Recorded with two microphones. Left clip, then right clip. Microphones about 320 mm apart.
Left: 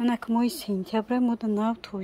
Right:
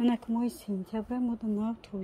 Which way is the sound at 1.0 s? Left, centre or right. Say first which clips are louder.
Left 8 dB; left.